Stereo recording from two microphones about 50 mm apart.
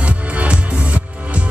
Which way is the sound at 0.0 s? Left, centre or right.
Right.